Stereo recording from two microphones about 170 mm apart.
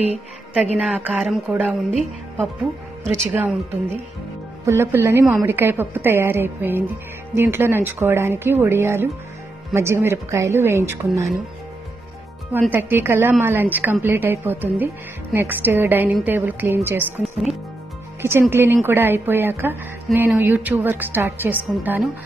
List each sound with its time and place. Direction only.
0.7 s a woman's voice: 10° right (ahead or behind)
3.0 s a woman's voice: 10° right (ahead or behind)
12.7 s a woman's voice: 15° right (ahead or behind)
17.2 s speech: centre (ahead or behind)
18.2 s a woman's voice: 15° right (ahead or behind)